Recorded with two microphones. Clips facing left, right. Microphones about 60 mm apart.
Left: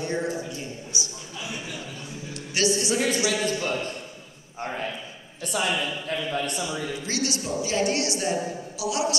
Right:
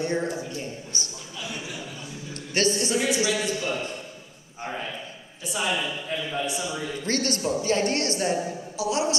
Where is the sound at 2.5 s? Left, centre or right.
Right.